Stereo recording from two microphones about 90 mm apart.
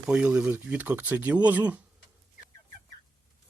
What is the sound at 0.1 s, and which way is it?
Speech, 10° right (ahead or behind).